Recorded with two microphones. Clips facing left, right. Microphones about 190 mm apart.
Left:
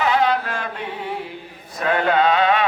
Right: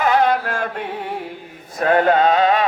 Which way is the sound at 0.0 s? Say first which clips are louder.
Right 2 dB; 50° right (ahead or behind).